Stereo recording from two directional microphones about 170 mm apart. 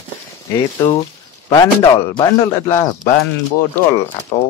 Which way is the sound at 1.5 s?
20° left (ahead or behind).